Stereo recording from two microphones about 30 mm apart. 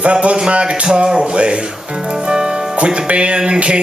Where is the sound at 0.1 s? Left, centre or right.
Right.